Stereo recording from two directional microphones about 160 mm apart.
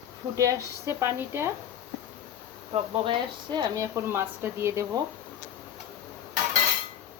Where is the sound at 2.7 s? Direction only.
35° right (ahead or behind); by 5.0 s 15° right (ahead or behind).